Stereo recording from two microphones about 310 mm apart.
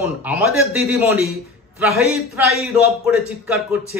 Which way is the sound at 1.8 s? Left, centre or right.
Centre.